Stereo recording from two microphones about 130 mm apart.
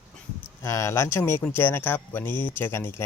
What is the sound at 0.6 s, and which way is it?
Speech, 25° left (ahead or behind).